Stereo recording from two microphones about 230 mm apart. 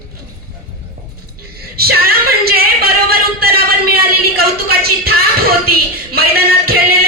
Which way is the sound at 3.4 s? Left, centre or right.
Right.